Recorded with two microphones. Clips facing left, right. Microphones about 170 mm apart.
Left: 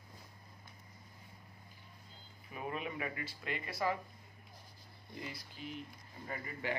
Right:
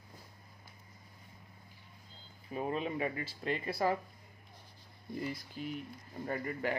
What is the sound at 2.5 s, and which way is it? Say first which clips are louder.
Speech: right 6 dB; 30° right (ahead or behind).